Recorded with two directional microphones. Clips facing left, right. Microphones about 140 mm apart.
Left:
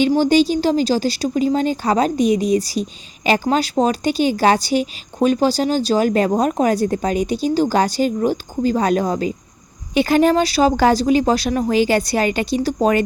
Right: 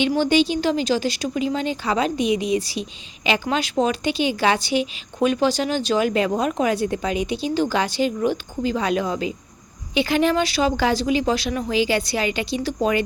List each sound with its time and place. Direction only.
0.0 s a woman's voice: 35° left (ahead or behind)